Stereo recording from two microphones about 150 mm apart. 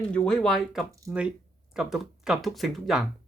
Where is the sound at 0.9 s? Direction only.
20° right (ahead or behind).